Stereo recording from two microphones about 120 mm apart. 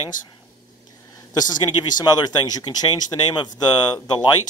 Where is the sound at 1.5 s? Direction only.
35° left (ahead or behind).